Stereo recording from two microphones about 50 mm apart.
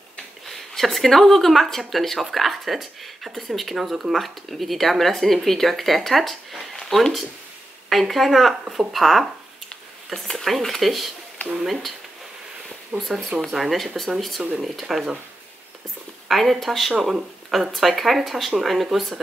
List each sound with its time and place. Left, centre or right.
0.5 s speech: centre
12.9 s speech: right
13.4 s speech: centre
16.3 s speech: centre